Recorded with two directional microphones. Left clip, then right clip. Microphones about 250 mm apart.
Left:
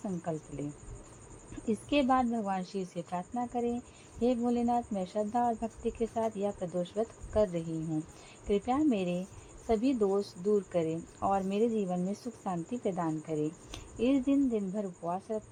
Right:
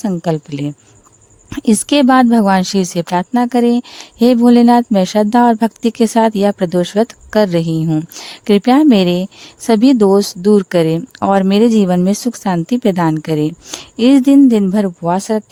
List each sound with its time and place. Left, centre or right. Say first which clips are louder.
0.0 s speech: right 19 dB; right
1.6 s speech: right 18 dB; right